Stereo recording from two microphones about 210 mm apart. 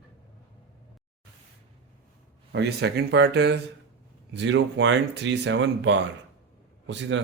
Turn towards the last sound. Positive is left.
turn(degrees=-60)  # may be behind; listen again after turning